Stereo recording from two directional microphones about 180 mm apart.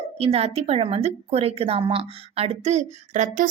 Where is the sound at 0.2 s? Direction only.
35° right (ahead or behind).